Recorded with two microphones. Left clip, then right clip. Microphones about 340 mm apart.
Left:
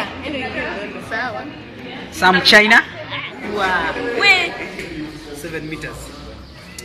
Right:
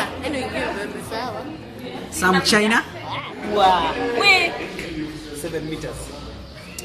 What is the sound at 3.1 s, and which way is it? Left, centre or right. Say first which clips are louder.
Music: even; centre.